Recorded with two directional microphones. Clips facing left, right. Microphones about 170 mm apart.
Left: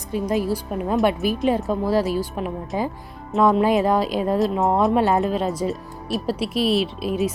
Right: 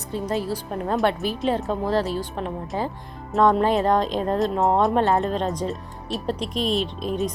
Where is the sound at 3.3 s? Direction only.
Centre (ahead or behind).